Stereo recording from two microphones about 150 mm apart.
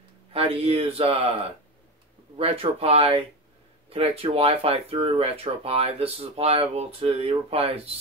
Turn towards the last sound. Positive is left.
turn(degrees=-40)  # may be behind; listen again after turning